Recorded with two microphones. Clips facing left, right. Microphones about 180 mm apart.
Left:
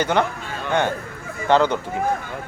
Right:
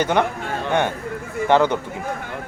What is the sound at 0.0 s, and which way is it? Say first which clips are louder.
Speech: right 1 dB; 15° right (ahead or behind).